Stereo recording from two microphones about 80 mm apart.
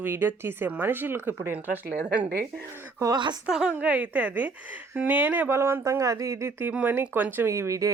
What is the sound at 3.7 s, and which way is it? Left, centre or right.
A woman's voice, centre.